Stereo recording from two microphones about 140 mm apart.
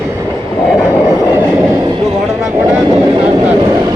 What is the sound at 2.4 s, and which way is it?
Speech, 20° right (ahead or behind).